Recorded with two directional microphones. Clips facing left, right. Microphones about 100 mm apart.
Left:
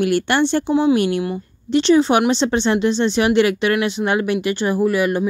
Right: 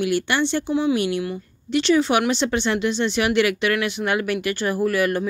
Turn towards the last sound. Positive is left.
turn(degrees=20)  # may be behind; listen again after turning